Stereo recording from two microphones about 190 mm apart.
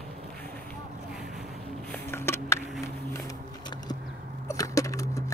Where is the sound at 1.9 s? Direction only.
15° left (ahead or behind).